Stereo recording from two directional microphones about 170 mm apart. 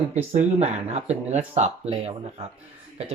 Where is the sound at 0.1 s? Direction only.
40° right (ahead or behind).